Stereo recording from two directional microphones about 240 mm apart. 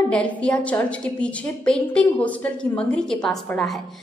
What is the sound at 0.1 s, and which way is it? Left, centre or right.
A woman's voice, centre.